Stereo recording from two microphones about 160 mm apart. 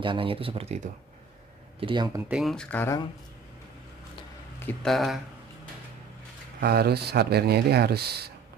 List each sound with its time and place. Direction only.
0.0 s speech: 30° right (ahead or behind)
2.1 s speech: 10° right (ahead or behind)
2.4 s speech: 5° left (ahead or behind)
4.8 s speech: centre (ahead or behind)
6.6 s speech: 80° right